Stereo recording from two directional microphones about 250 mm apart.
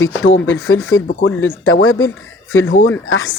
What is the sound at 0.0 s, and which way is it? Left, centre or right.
Speech, left.